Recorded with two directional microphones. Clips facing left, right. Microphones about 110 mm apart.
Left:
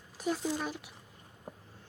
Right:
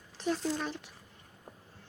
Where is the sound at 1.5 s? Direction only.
15° left (ahead or behind).